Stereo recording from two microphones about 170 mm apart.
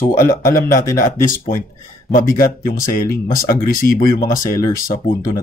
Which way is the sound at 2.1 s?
55° left (ahead or behind).